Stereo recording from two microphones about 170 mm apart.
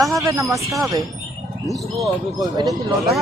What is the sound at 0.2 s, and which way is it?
Speech, 20° right (ahead or behind).